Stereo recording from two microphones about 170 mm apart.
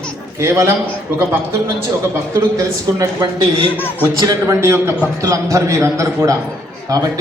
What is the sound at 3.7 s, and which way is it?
Speech, 10° left (ahead or behind).